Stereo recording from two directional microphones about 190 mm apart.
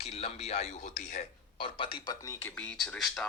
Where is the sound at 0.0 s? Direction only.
30° left (ahead or behind).